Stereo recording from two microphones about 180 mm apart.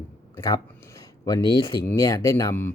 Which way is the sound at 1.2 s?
20° left (ahead or behind).